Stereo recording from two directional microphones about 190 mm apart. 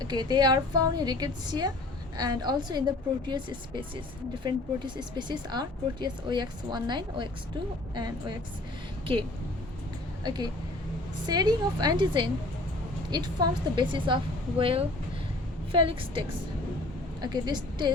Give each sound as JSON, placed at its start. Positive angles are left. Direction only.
{"t": 0.0, "sound": "speech", "side_deg": -20}
{"t": 10.2, "sound": "speech", "side_deg": -20}